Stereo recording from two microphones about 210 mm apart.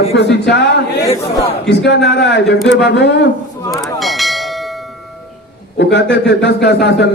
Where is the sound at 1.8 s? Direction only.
55° left (ahead or behind).